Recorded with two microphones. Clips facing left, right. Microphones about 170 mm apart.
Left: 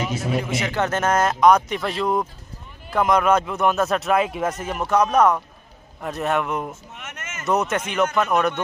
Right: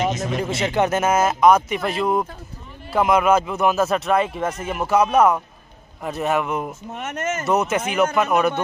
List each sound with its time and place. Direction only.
0.1 s speech: 10° left (ahead or behind)
0.5 s speech: 20° right (ahead or behind); by 6.7 s centre (ahead or behind)
6.9 s speech: 40° right (ahead or behind)
7.4 s speech: 5° right (ahead or behind)